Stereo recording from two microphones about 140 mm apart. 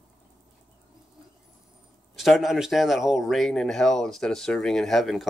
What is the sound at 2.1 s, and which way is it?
Speech, centre (ahead or behind).